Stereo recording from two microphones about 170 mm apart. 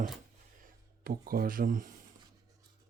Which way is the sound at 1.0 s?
60° right (ahead or behind).